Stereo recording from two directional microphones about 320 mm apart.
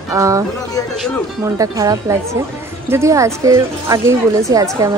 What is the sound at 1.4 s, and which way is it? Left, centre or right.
A woman's voice, centre.